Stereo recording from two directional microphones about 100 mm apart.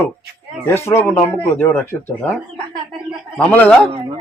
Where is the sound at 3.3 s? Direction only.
15° left (ahead or behind).